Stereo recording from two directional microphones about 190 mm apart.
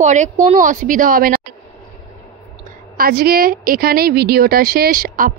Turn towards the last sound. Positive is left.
turn(degrees=-50)  # may be behind; listen again after turning